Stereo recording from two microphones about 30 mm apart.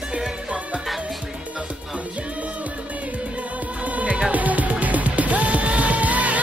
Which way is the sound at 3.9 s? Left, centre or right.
Right.